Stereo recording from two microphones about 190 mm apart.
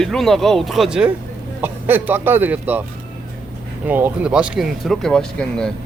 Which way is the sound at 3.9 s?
10° right (ahead or behind).